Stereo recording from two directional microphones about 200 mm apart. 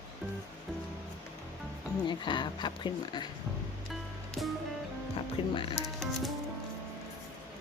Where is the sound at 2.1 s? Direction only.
25° left (ahead or behind).